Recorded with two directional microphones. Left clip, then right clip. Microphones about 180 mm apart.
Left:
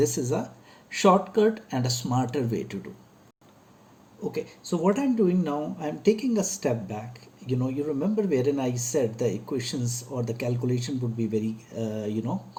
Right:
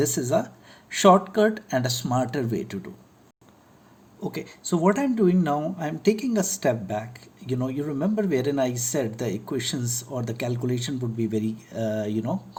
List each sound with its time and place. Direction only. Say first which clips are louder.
0.0 s speech: right 2 dB; 45° right (ahead or behind)
4.3 s speech: right 1 dB; 50° right (ahead or behind)